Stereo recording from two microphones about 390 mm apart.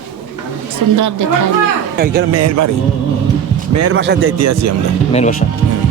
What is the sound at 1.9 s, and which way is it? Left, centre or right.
Speech, right.